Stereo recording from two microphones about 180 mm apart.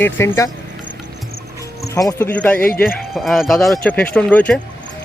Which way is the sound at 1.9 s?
15° left (ahead or behind).